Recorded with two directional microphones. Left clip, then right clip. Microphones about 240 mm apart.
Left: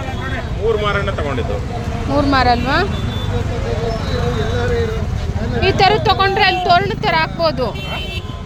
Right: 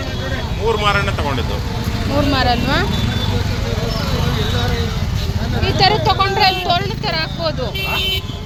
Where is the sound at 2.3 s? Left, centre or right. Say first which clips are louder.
Left 4 dB; left.